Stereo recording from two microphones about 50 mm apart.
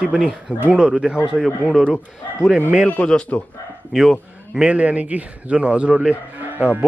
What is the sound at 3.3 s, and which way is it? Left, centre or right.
Speech, left.